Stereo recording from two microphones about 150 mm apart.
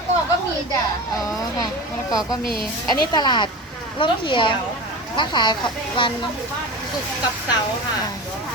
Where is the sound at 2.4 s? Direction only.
80° left.